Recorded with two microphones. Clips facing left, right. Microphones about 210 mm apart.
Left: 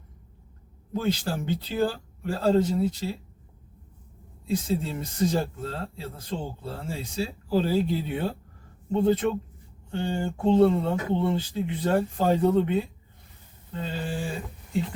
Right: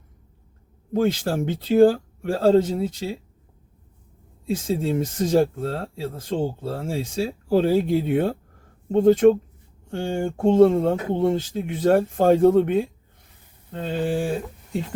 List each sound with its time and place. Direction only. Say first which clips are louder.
0.9 s speech: right 6 dB; 50° right (ahead or behind)
4.5 s speech: right 4 dB; 50° right (ahead or behind)